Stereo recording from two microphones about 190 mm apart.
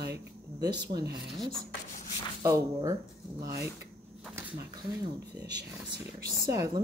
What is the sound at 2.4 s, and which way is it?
Speech, 15° right (ahead or behind).